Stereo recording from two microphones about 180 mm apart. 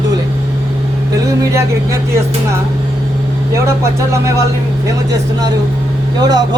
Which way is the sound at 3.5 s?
15° right (ahead or behind).